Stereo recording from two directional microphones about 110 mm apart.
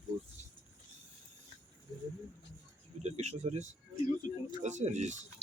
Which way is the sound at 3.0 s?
90° right.